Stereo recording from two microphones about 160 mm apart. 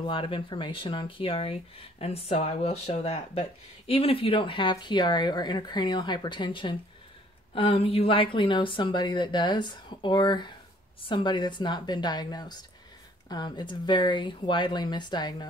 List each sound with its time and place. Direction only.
0.0 s a woman's voice: 35° left (ahead or behind)